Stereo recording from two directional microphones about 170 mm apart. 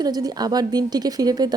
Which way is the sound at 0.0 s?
25° right (ahead or behind).